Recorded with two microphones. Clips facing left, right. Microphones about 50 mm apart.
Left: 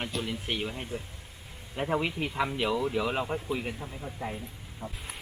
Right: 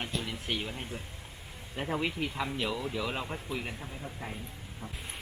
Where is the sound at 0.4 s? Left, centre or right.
Centre.